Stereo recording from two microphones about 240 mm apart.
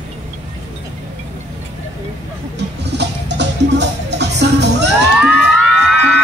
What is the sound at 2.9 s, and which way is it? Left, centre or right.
Music, right.